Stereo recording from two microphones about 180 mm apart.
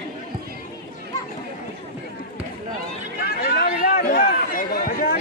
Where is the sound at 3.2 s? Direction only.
60° left (ahead or behind).